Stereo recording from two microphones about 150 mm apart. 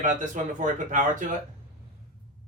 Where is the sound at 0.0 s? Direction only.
55° right (ahead or behind).